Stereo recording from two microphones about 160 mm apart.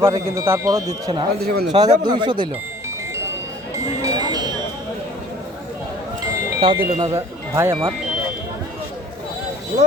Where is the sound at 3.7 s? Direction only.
20° right (ahead or behind).